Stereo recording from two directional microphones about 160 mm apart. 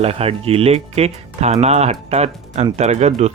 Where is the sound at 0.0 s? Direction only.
40° right (ahead or behind).